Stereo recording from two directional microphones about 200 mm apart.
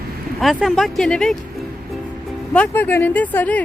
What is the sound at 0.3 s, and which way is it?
Speech, centre (ahead or behind).